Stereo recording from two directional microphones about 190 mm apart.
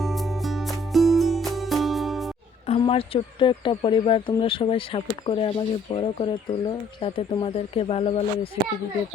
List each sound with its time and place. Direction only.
0.0 s music: centre (ahead or behind)
2.6 s speech: 30° left (ahead or behind)